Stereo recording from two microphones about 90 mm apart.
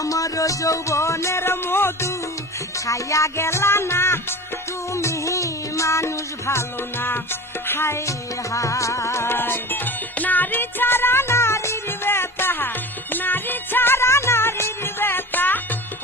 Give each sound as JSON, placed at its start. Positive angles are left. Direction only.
{"t": 0.0, "sound": "music", "side_deg": 40}